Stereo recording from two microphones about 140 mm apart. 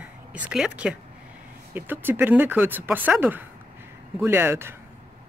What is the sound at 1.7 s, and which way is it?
Speech, 15° right (ahead or behind).